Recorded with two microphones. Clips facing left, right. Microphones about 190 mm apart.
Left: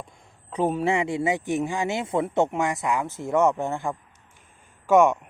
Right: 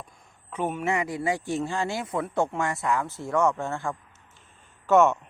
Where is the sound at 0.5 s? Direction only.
35° left (ahead or behind); by 3.9 s 15° left (ahead or behind).